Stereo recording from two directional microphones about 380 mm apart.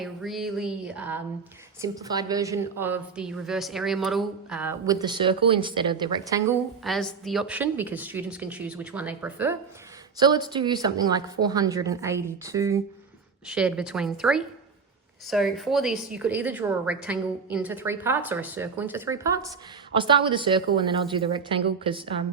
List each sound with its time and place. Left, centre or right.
0.0 s a woman's voice: centre